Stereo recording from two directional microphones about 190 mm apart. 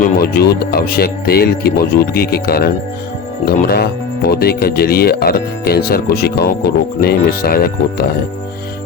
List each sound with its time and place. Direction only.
0.2 s speech: 55° left (ahead or behind)